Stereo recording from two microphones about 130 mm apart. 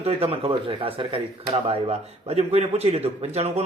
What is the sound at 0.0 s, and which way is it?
Speech, 50° right (ahead or behind).